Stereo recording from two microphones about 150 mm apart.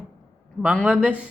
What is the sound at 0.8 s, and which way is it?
Speech, 10° right (ahead or behind).